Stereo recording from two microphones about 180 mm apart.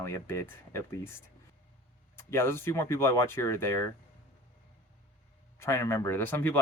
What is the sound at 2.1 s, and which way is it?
Speech, 15° left (ahead or behind).